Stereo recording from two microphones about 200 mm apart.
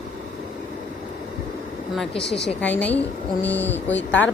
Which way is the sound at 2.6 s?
10° left (ahead or behind).